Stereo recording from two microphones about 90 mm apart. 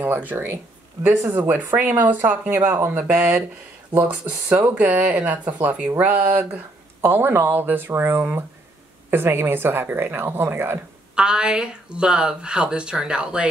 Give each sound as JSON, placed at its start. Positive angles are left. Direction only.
{"t": 0.0, "sound": "speech", "side_deg": -20}
{"t": 11.1, "sound": "speech", "side_deg": -10}